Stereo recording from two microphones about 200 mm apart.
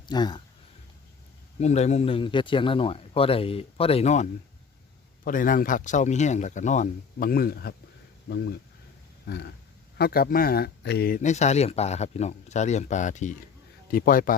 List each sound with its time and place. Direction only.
0.0 s speech: 20° left (ahead or behind)
1.5 s a man's voice: 35° left (ahead or behind)